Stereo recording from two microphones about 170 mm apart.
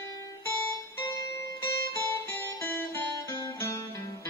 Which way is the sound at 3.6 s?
20° left (ahead or behind).